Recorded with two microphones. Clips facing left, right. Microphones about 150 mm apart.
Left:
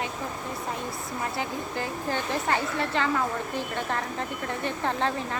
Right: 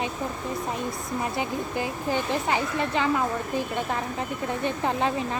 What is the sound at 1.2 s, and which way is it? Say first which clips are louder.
Speech: right 2 dB; 15° right (ahead or behind).